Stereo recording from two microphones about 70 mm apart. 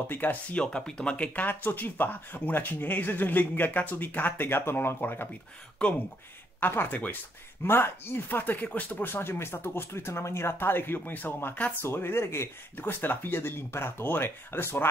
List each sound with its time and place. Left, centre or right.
0.1 s speech: left
0.6 s speech: centre; by 5.3 s left
5.8 s speech: centre
6.6 s speech: left